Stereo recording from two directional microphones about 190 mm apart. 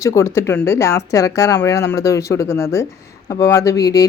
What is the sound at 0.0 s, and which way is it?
Speech, 15° left (ahead or behind).